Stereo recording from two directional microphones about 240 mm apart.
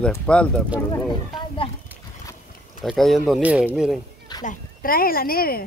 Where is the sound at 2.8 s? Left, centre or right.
Centre.